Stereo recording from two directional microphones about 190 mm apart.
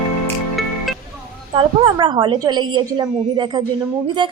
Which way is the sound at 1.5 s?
25° right (ahead or behind).